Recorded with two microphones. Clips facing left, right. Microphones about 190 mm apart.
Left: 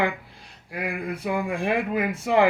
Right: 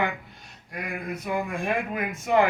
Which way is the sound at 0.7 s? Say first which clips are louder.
Left 3 dB; 30° left (ahead or behind).